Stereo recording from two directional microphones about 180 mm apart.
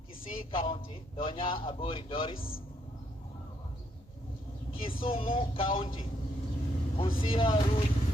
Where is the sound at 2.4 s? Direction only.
55° left (ahead or behind).